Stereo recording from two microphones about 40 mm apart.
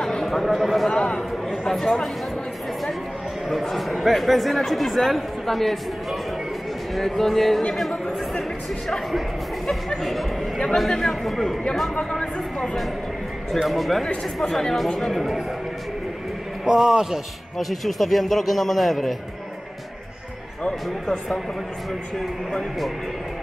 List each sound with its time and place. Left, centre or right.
0.0 s a sound: centre
0.5 s speech: centre
0.9 s speech: centre
3.4 s speech: centre
12.0 s speech: centre
13.5 s speech: centre
16.6 s speech: centre
22.2 s speech: centre